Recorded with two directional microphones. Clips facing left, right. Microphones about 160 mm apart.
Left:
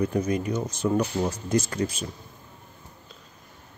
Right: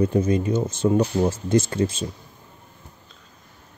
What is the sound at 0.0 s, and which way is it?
Speech, 30° right (ahead or behind).